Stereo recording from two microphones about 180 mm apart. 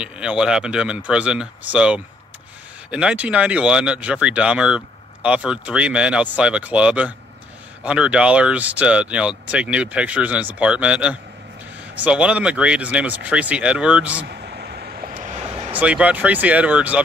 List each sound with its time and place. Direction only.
0.0 s speech: 5° right (ahead or behind)
14.2 s vehicle: 60° right (ahead or behind)
15.7 s speech: 5° right (ahead or behind)